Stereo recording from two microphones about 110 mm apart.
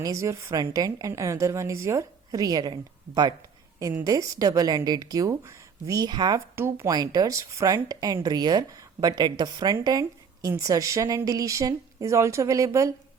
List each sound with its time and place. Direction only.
0.0 s a woman's voice: 30° right (ahead or behind)
4.0 s speech: 30° right (ahead or behind)
6.6 s a woman's voice: 25° right (ahead or behind)
6.9 s a woman's voice: 35° right (ahead or behind)